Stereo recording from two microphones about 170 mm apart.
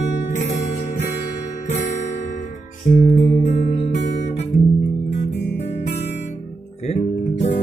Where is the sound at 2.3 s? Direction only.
45° left (ahead or behind).